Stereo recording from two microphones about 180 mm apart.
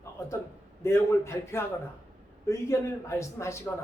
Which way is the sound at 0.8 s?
15° left (ahead or behind).